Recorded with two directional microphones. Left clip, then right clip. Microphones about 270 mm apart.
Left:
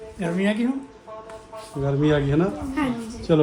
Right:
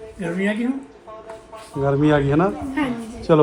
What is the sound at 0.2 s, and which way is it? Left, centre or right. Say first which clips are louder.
Speech: right 1 dB; left.